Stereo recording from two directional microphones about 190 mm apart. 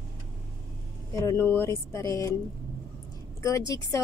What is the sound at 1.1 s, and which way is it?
Speech, 15° left (ahead or behind).